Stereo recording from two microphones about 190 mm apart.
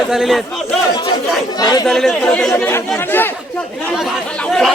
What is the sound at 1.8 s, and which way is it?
Speech, centre (ahead or behind).